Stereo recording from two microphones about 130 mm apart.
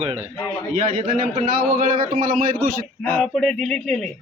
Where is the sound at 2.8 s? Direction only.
15° left (ahead or behind).